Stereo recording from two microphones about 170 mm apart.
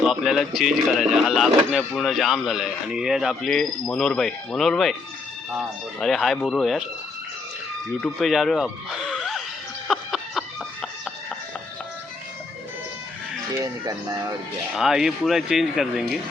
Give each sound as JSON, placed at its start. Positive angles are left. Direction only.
{"t": 0.0, "sound": "speech", "side_deg": 0}
{"t": 8.0, "sound": "speech", "side_deg": 0}
{"t": 9.8, "sound": "music", "side_deg": 0}
{"t": 13.5, "sound": "speech", "side_deg": -20}
{"t": 14.8, "sound": "speech", "side_deg": -5}